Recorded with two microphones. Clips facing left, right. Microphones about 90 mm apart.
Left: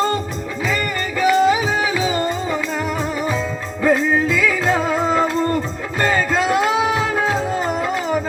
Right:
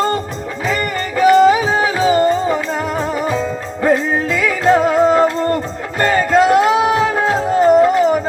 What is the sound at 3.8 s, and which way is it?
Music, 45° right (ahead or behind).